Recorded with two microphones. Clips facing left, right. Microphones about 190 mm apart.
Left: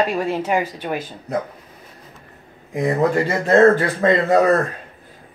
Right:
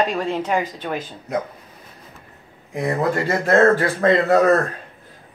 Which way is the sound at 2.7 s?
20° left (ahead or behind).